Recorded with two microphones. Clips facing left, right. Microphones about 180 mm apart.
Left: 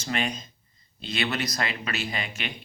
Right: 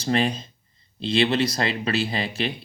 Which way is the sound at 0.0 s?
35° right (ahead or behind).